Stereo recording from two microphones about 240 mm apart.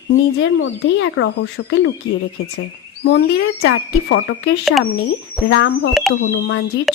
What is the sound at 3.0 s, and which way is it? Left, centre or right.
Speech, left.